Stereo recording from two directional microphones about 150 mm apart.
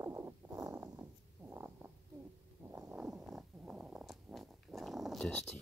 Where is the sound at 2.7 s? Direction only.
10° right (ahead or behind).